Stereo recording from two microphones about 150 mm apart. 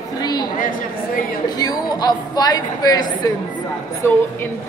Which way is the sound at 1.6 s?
25° left (ahead or behind).